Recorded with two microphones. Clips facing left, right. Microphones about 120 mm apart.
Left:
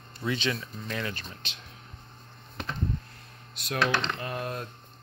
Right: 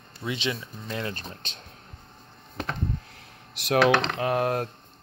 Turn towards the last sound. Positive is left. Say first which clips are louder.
# right 9 dB
turn(degrees=-65)  # may be behind; listen again after turning